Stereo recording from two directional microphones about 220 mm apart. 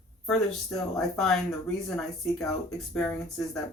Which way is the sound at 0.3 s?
Centre (ahead or behind).